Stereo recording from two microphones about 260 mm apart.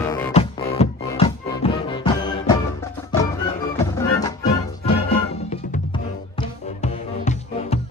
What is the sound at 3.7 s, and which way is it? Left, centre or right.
Music, centre.